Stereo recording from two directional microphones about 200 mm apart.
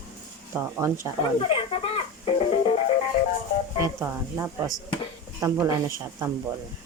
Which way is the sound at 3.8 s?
15° right (ahead or behind).